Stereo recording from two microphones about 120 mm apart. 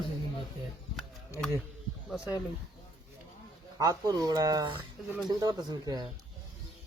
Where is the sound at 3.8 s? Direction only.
30° right (ahead or behind).